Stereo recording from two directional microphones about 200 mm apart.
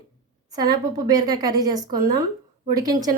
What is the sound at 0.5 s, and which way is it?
A woman's voice, 20° right (ahead or behind).